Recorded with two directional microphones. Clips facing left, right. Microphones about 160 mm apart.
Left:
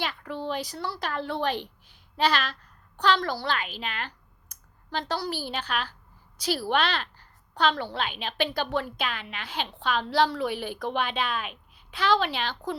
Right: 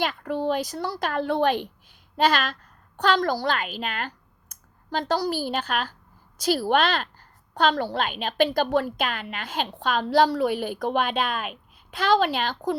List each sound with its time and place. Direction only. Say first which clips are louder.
0.0 s a child's voice: right 6 dB; 45° right (ahead or behind)